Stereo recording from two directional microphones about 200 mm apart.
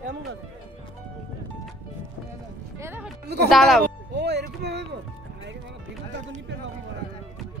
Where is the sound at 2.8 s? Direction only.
10° right (ahead or behind).